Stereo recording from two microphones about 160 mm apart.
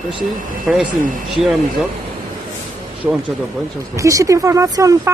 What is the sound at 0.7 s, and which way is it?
Speech, 5° right (ahead or behind).